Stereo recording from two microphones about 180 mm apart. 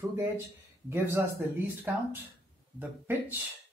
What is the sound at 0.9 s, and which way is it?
Speech, 15° right (ahead or behind).